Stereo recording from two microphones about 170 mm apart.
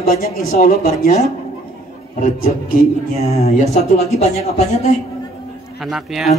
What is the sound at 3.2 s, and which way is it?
Speech, 40° left (ahead or behind).